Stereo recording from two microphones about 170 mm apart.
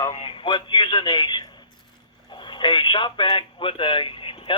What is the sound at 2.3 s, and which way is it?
Speech, 30° left (ahead or behind).